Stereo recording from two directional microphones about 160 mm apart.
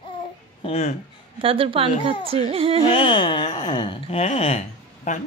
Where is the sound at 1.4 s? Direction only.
35° right (ahead or behind).